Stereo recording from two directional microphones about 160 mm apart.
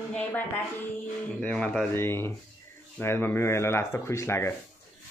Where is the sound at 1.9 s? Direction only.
15° left (ahead or behind).